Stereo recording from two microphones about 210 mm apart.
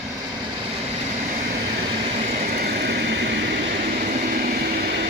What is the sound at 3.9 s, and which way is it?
Vehicle, 40° right (ahead or behind).